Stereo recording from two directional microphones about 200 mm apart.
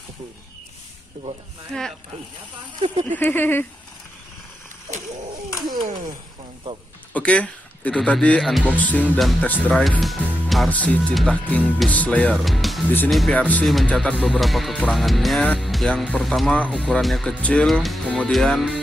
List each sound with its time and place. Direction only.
1.2 s speech: 40° right (ahead or behind)
1.7 s speech: centre (ahead or behind)
3.1 s speech: 10° left (ahead or behind)
5.7 s speech: 40° right (ahead or behind)
7.2 s speech: 5° left (ahead or behind)